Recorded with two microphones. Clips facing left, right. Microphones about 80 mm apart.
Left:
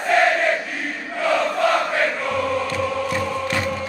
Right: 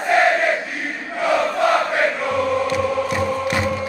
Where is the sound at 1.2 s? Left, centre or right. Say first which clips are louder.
Right 1 dB; centre.